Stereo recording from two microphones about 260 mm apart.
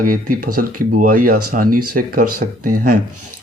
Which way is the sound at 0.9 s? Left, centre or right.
Right.